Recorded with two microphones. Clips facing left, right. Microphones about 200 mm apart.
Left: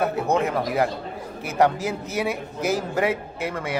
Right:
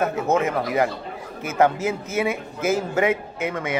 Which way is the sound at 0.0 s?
Centre (ahead or behind).